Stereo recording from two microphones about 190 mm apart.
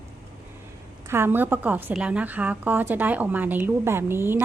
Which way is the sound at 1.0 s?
10° right (ahead or behind).